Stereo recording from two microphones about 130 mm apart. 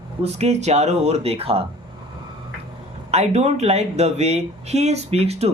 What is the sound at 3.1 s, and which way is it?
Speech, 55° right (ahead or behind).